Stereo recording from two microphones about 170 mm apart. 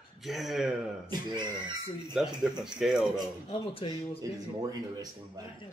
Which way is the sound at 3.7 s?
30° left (ahead or behind).